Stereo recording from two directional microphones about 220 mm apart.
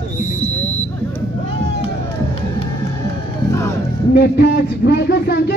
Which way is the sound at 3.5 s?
10° left (ahead or behind).